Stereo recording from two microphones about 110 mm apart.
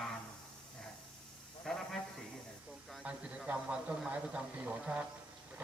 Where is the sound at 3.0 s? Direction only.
10° right (ahead or behind).